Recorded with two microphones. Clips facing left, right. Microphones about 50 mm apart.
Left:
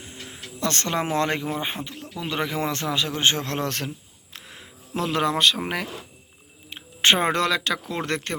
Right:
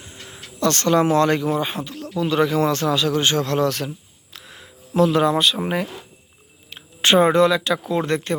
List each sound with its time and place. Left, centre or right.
0.6 s a man's voice: left
4.9 s speech: left
6.7 s a sound: left
7.3 s speech: left